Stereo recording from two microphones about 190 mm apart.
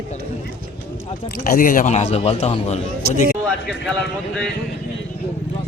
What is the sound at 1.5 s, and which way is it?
A man's voice, 45° left (ahead or behind).